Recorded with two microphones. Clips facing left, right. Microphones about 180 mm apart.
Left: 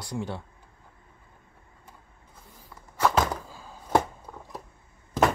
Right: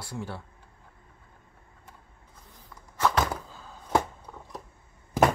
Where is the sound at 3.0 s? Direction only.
10° left (ahead or behind).